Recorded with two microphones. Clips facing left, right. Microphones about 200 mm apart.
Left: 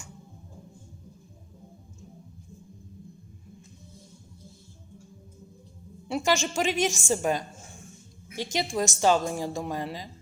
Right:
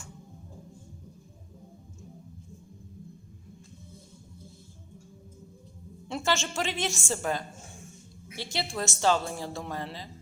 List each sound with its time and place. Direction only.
6.1 s a woman's voice: 15° left (ahead or behind)